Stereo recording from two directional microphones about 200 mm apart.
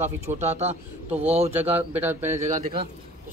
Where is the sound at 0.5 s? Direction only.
30° right (ahead or behind).